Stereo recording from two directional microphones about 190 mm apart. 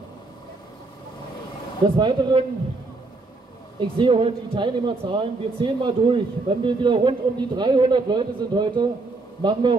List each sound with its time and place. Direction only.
2.0 s speech: 25° right (ahead or behind)
4.0 s speech: 25° right (ahead or behind)